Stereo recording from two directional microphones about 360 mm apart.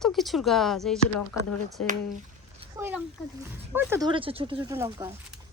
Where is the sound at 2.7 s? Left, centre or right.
Centre.